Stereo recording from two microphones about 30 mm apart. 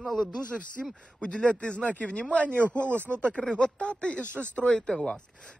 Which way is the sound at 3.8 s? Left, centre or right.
Left.